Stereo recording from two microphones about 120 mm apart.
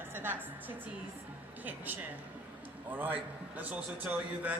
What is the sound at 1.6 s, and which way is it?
A man's voice, 15° right (ahead or behind).